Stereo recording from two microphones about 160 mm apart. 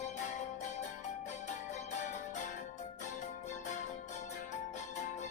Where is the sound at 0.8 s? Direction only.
50° left (ahead or behind).